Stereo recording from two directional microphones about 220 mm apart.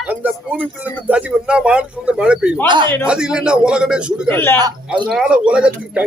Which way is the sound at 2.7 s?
20° right (ahead or behind).